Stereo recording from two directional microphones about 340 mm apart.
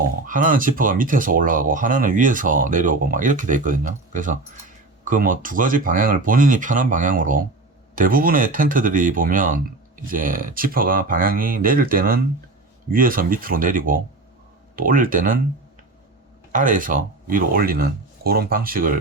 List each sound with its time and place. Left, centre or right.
0.3 s speech: right
16.5 s speech: right